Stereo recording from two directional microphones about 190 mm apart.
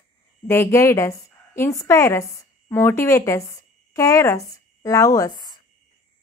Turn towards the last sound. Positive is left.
turn(degrees=15)  # may be behind; listen again after turning